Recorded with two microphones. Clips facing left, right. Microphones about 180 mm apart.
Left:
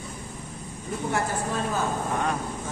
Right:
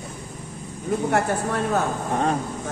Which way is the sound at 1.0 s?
65° right (ahead or behind).